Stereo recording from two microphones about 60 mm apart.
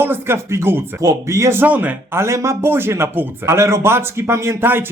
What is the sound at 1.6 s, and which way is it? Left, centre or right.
Speech, right.